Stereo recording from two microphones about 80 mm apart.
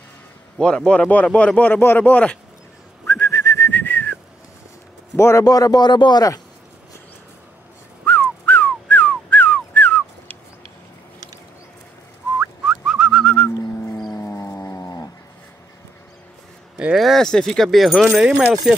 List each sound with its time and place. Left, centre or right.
0.6 s speech: centre
3.1 s whistling: left
3.7 s whistling: left
5.1 s a man's voice: left
5.4 s speech: left
8.0 s whistling: centre
12.6 s whistling: centre
13.2 s whistling: centre
14.1 s music: left
14.5 s dog: left
16.7 s speech: centre